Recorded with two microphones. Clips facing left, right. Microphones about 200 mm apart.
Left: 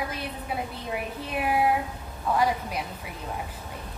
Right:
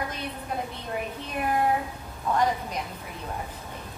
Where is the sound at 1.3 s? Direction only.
5° left (ahead or behind).